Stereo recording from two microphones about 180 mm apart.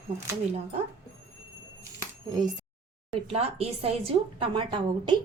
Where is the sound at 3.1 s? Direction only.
35° right (ahead or behind).